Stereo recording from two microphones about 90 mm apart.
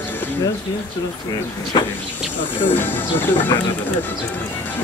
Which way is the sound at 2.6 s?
20° left (ahead or behind).